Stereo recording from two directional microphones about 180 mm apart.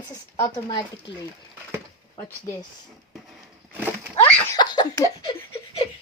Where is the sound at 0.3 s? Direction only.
20° left (ahead or behind).